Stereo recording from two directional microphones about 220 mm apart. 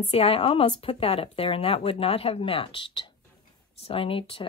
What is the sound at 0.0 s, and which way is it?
A woman's voice, 25° left (ahead or behind).